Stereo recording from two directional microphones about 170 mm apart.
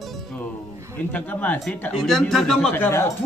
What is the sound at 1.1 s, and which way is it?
Speech, 10° left (ahead or behind).